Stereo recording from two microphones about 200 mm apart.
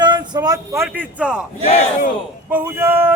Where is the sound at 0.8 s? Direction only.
5° right (ahead or behind).